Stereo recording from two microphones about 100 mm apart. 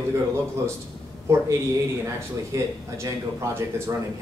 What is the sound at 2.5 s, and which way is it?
Speech, 30° right (ahead or behind).